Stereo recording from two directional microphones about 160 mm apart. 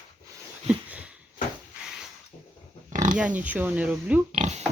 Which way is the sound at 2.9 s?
50° right (ahead or behind).